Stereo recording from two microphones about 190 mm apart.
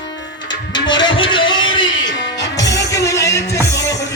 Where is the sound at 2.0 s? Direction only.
65° left (ahead or behind).